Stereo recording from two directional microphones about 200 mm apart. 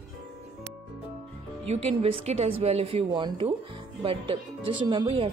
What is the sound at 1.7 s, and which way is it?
Speech, 30° right (ahead or behind).